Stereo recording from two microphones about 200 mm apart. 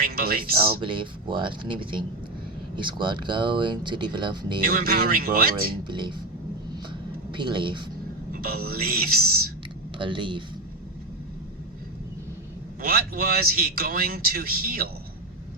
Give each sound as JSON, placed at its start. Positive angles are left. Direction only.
{"t": 0.0, "sound": "a man's voice", "side_deg": -50}
{"t": 0.8, "sound": "speech", "side_deg": -25}
{"t": 4.6, "sound": "a man's voice", "side_deg": -50}
{"t": 5.9, "sound": "speech", "side_deg": -25}
{"t": 7.3, "sound": "speech", "side_deg": -25}
{"t": 8.3, "sound": "a man's voice", "side_deg": -45}
{"t": 10.0, "sound": "speech", "side_deg": -25}
{"t": 12.8, "sound": "a man's voice", "side_deg": -45}